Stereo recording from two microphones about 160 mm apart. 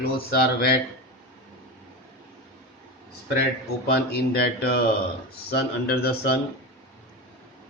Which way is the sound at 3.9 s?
75° left (ahead or behind).